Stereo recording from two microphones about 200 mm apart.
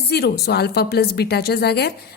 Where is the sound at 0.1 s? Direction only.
55° left (ahead or behind).